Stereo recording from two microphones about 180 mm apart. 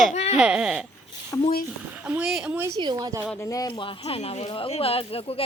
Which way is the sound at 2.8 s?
20° right (ahead or behind).